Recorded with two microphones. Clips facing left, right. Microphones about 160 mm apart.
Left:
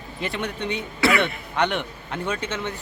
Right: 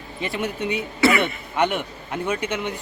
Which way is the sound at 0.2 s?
5° right (ahead or behind).